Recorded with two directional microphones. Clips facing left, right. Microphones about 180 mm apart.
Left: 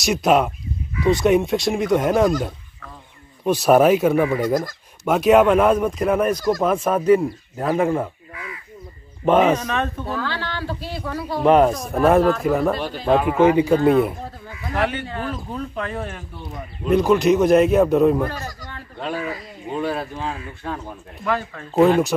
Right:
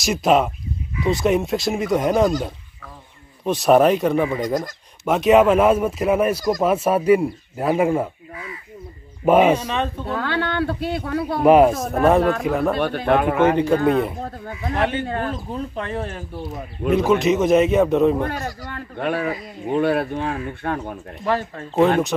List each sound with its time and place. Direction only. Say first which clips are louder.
0.0 s speech: even; centre (ahead or behind)
3.4 s speech: even; centre (ahead or behind)
9.2 s a man's voice: right 1 dB; 10° right (ahead or behind)
10.0 s speech: right 3 dB; 60° right (ahead or behind)
11.4 s speech: right 2 dB; 5° right (ahead or behind)
12.7 s speech: right 1 dB; 60° right (ahead or behind)
13.4 s speech: left 2 dB; 10° left (ahead or behind)
14.5 s a man's voice: right 1 dB; 25° right (ahead or behind)
15.0 s speech: right 3 dB; 50° right (ahead or behind)
15.7 s speech: right 1 dB; 30° right (ahead or behind)
16.9 s speech: left 2 dB; centre (ahead or behind)
18.4 s speech: right 4 dB; 60° right (ahead or behind)
21.2 s speech: right 1 dB; 30° right (ahead or behind)